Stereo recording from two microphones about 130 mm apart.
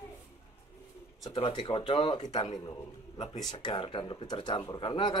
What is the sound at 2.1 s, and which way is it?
Speech, 55° left (ahead or behind).